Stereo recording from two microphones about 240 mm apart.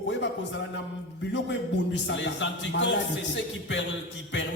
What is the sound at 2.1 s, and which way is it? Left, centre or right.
Speech, left.